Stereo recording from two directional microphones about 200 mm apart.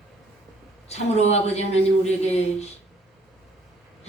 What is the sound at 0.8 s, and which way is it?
A woman's voice, 35° left (ahead or behind).